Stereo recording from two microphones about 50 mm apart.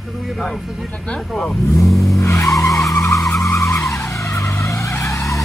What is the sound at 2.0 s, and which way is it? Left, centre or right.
Vehicle, left.